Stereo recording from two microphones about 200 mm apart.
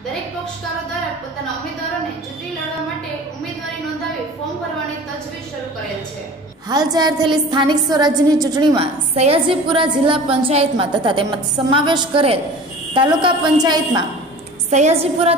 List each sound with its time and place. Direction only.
6.7 s a woman's voice: 20° right (ahead or behind)
9.1 s a woman's voice: 30° right (ahead or behind)
14.7 s a woman's voice: 35° right (ahead or behind)